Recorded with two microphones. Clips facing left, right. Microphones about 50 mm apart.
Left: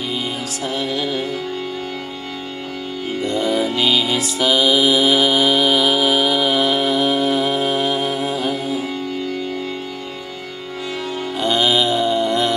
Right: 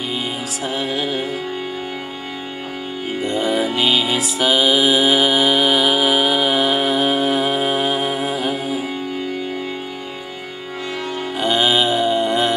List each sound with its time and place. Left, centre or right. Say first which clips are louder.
0.7 s music: even; centre
3.2 s music: even; centre
11.3 s music: even; centre